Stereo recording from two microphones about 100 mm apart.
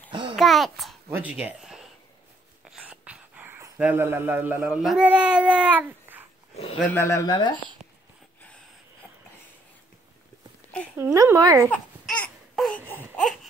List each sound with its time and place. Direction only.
0.1 s babbling: 55° right (ahead or behind)
0.4 s babbling: centre (ahead or behind)
1.0 s speech: 20° right (ahead or behind)
1.3 s speech: 5° right (ahead or behind)
2.8 s a sound: 15° right (ahead or behind)
5.0 s child singing: 15° right (ahead or behind)
6.5 s a sound: 75° left (ahead or behind)
6.9 s speech: 30° left (ahead or behind)
7.2 s speech: 50° left (ahead or behind)
11.3 s speech: 35° right (ahead or behind)
11.7 s babbling: 15° left (ahead or behind)
12.5 s a sound: 5° left (ahead or behind)
12.8 s baby cry: 20° left (ahead or behind)